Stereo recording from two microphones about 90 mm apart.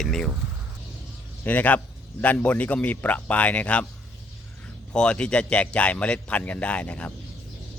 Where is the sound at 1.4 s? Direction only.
20° left (ahead or behind).